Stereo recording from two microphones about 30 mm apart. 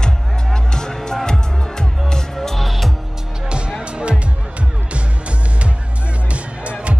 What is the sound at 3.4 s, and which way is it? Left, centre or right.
Music, right.